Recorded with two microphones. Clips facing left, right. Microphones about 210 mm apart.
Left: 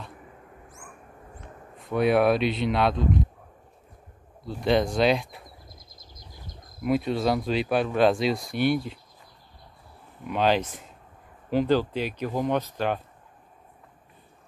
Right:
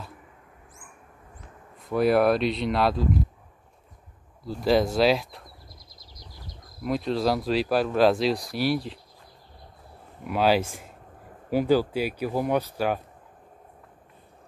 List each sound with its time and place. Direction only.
1.8 s speech: centre (ahead or behind)
4.5 s speech: centre (ahead or behind)
5.9 s a sound: 50° left (ahead or behind)
6.8 s speech: 5° left (ahead or behind)
10.2 s speech: 5° right (ahead or behind)